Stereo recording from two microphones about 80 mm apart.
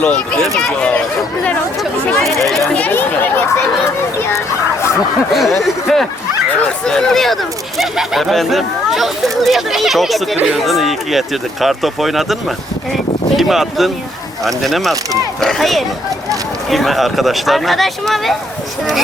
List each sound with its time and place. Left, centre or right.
0.0 s speech: centre
2.1 s speech: centre
2.7 s chatter: left
5.3 s speech: centre
10.3 s speech: centre
10.6 s speech: centre